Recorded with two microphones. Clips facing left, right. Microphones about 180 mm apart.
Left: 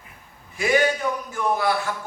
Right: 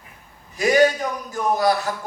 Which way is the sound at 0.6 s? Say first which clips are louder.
Right 4 dB; 40° right (ahead or behind).